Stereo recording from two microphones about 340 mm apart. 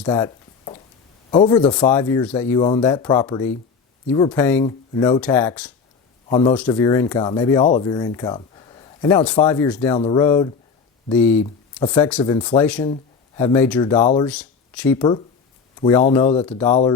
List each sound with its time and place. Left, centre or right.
0.0 s a sound: centre
1.3 s speech: centre
6.2 s a man's voice: centre
6.5 s speech: centre; by 14.3 s left
14.3 s speech: centre
14.9 s speech: centre